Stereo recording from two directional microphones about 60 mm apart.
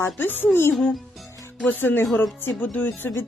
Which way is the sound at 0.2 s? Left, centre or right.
Left.